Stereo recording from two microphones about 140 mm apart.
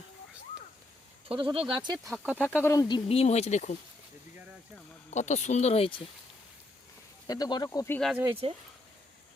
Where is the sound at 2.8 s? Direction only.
40° left (ahead or behind).